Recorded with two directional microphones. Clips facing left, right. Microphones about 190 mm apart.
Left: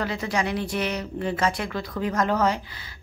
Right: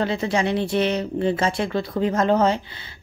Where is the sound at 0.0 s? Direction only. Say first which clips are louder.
Right 5 dB; 25° right (ahead or behind).